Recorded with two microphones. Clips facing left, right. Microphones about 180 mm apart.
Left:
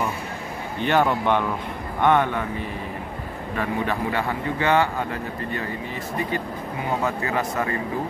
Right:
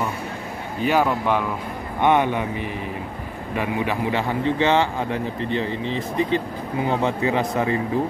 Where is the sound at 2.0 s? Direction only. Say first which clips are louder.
Right 1 dB; 15° right (ahead or behind).